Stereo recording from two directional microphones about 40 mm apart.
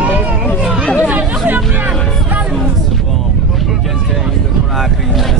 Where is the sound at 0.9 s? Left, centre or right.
Right.